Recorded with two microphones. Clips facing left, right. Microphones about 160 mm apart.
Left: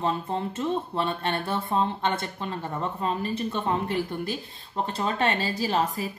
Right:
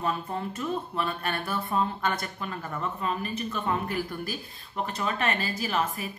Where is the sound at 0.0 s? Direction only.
25° left (ahead or behind).